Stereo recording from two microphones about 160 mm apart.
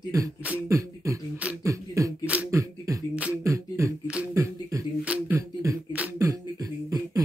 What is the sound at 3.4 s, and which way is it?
Beatboxing, 20° right (ahead or behind).